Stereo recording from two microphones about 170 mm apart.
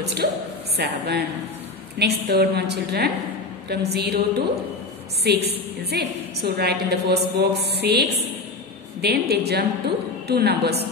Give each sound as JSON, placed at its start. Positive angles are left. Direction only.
{"t": 0.0, "sound": "a woman's voice", "side_deg": -75}
{"t": 5.2, "sound": "a woman's voice", "side_deg": -75}